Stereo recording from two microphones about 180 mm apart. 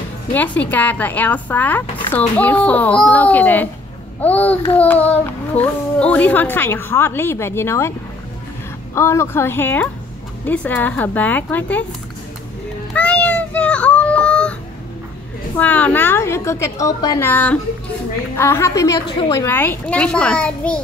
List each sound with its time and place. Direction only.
0.3 s babbling: 10° left (ahead or behind)
8.9 s babbling: 15° left (ahead or behind)
12.9 s a sound: 5° left (ahead or behind)
15.5 s babbling: 10° left (ahead or behind)
18.3 s a woman's voice: 15° left (ahead or behind)
19.2 s babbling: 15° left (ahead or behind)